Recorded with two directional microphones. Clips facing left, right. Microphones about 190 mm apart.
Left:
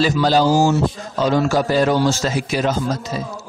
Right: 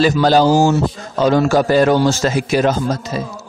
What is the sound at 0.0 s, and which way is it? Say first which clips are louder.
A man's voice: right 3 dB; 55° right (ahead or behind).